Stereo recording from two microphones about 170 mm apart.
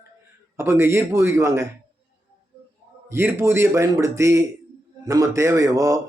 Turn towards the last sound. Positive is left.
turn(degrees=-20)  # may be behind; listen again after turning